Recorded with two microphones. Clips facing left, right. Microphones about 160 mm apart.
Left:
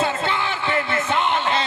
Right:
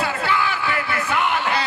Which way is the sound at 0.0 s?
25° left (ahead or behind).